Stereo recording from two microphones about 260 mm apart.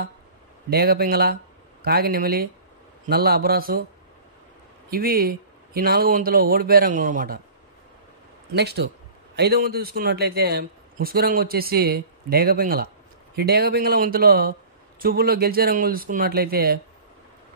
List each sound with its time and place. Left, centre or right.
0.7 s a man's voice: right
4.8 s a man's voice: right
8.5 s a man's voice: right